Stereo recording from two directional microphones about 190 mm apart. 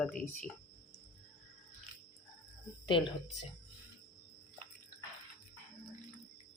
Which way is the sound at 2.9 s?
25° left (ahead or behind).